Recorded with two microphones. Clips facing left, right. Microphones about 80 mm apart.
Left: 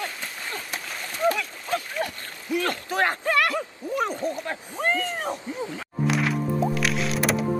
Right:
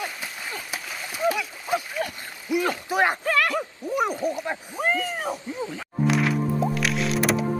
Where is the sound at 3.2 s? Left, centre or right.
Centre.